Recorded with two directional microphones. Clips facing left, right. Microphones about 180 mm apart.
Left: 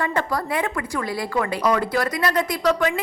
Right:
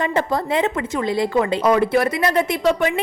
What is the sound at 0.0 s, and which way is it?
A woman's voice, 20° right (ahead or behind).